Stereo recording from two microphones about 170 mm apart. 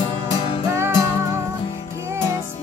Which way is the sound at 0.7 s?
15° right (ahead or behind).